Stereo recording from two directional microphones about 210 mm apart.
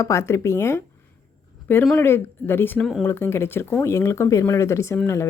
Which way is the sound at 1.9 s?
10° left (ahead or behind).